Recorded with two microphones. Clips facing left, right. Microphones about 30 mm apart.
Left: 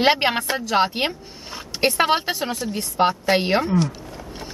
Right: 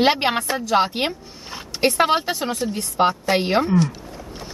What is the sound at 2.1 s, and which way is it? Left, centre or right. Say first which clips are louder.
Speech: right 1 dB; centre.